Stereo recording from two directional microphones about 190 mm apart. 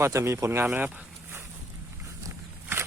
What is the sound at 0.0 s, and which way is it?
Speech, 15° right (ahead or behind).